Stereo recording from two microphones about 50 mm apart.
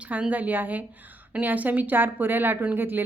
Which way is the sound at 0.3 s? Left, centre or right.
Right.